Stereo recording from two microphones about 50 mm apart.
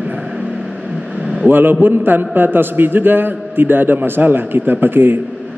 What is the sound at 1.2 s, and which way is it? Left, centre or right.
Vehicle, centre.